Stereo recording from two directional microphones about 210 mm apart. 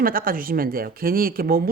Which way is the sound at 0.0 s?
45° right (ahead or behind).